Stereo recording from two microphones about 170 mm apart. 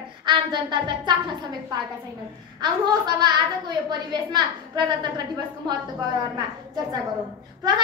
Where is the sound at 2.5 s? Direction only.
25° right (ahead or behind).